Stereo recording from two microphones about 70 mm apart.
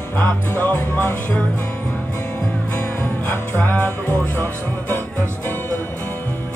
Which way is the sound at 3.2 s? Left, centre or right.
Left.